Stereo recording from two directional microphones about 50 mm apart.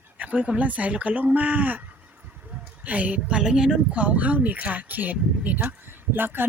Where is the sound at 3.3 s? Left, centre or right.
Centre.